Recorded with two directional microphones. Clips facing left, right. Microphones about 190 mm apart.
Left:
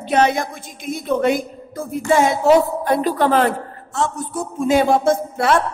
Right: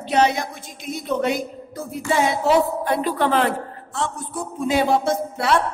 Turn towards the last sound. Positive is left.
turn(degrees=50)  # may be behind; listen again after turning